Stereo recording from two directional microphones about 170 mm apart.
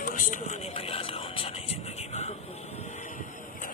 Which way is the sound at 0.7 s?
35° left (ahead or behind).